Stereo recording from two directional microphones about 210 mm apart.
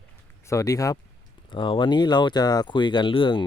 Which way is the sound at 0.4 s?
15° left (ahead or behind).